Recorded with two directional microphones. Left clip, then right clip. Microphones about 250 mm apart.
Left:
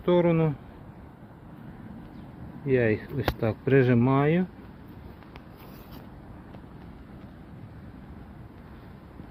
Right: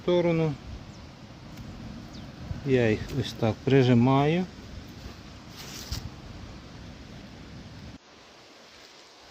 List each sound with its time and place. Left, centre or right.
0.0 s speech: centre
2.6 s speech: centre